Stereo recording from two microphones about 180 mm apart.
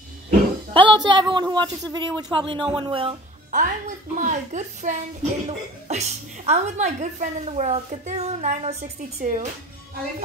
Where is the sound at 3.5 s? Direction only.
45° right (ahead or behind).